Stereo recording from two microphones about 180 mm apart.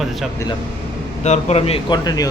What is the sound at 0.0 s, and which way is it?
Speech, centre (ahead or behind).